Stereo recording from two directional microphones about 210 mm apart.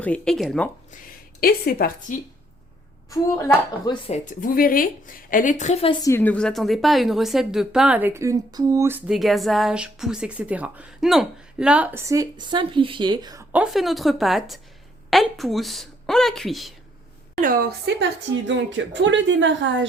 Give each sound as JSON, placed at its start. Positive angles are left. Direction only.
{"t": 0.0, "sound": "a woman's voice", "side_deg": 5}
{"t": 1.4, "sound": "a woman's voice", "side_deg": 45}
{"t": 3.1, "sound": "speech", "side_deg": 15}
{"t": 4.1, "sound": "a woman's voice", "side_deg": 40}
{"t": 13.5, "sound": "a woman's voice", "side_deg": -5}
{"t": 17.4, "sound": "a woman's voice", "side_deg": -45}
{"t": 18.4, "sound": "a woman's voice", "side_deg": -60}